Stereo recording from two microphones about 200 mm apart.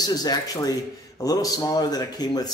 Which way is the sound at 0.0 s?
20° left (ahead or behind).